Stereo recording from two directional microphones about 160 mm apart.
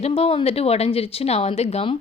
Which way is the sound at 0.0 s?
40° left (ahead or behind).